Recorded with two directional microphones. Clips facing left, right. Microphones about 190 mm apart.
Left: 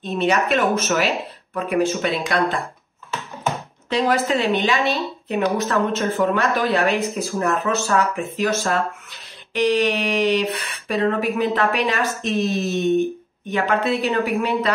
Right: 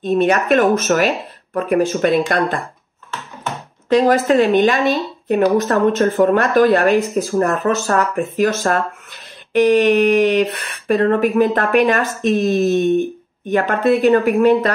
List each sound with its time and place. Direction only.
0.0 s speech: 50° right (ahead or behind)
3.9 s speech: 45° right (ahead or behind)